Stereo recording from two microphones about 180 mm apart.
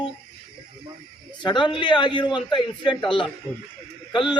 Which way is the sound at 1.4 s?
25° left (ahead or behind).